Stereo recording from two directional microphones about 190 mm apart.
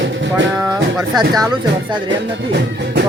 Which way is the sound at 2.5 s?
60° right (ahead or behind).